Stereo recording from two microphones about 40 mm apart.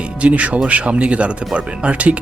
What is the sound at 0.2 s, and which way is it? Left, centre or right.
Speech, right.